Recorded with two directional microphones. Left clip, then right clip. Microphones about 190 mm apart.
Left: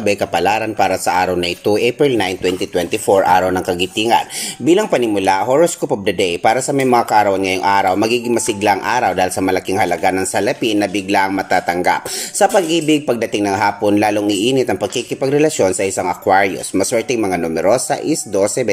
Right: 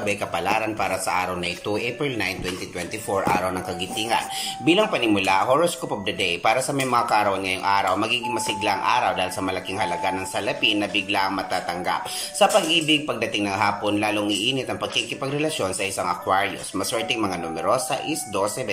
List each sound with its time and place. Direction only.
0.0 s speech: 40° left (ahead or behind)